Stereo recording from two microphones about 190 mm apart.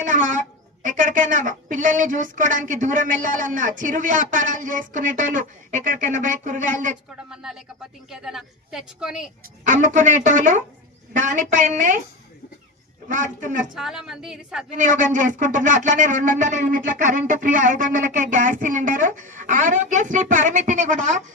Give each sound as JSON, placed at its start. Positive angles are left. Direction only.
{"t": 0.0, "sound": "speech", "side_deg": -45}
{"t": 7.3, "sound": "a woman's voice", "side_deg": -5}
{"t": 9.6, "sound": "speech", "side_deg": -45}
{"t": 13.1, "sound": "speech", "side_deg": -40}
{"t": 13.7, "sound": "a woman's voice", "side_deg": 0}
{"t": 14.8, "sound": "speech", "side_deg": -45}